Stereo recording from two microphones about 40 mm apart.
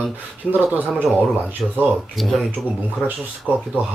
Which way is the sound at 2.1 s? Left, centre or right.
Centre.